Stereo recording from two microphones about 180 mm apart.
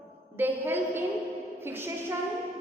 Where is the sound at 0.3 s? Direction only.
10° right (ahead or behind).